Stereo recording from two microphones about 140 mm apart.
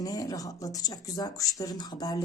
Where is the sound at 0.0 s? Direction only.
25° left (ahead or behind).